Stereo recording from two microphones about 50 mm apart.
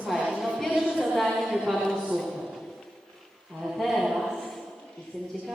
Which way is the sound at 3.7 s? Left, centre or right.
Centre.